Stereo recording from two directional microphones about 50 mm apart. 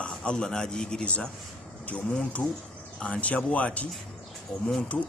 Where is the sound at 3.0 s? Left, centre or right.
Left.